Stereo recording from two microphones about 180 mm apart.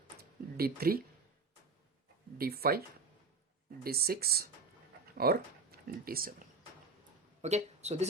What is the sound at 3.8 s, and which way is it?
Speech, 60° right (ahead or behind).